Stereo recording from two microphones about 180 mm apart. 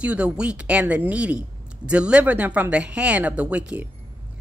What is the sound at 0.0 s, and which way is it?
A woman's voice, 5° right (ahead or behind).